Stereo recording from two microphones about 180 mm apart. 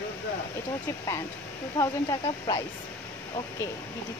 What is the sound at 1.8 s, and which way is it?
Speech, 20° left (ahead or behind).